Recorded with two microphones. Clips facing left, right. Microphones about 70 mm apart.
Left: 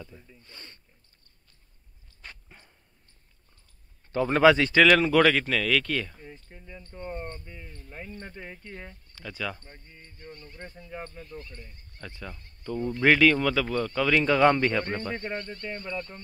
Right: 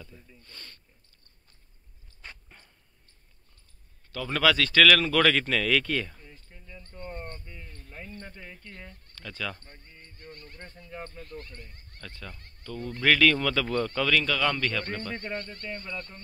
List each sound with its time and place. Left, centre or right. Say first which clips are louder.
0.0 s sniff: left 3 dB; centre
2.5 s dog: left 1 dB; centre
4.1 s speech: left 6 dB; left; by 6.1 s centre
6.2 s a sound: left 5 dB; left
7.3 s speech: left 2 dB; centre
14.0 s speech: left 8 dB; left